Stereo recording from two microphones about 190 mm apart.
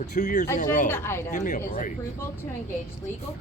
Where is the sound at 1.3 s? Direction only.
40° left (ahead or behind).